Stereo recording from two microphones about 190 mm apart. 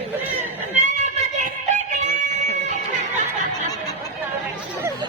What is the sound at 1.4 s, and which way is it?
Music, 40° right (ahead or behind).